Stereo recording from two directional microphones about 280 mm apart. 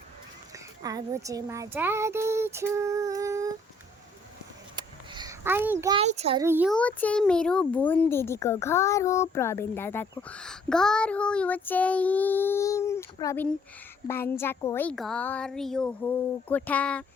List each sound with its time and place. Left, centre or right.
0.5 s speech: centre
4.8 s a sound: centre
6.0 s a child's voice: right
6.4 s speech: centre
6.7 s a child's voice: centre